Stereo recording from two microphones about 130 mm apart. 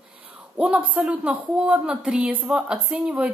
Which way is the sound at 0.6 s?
10° right (ahead or behind).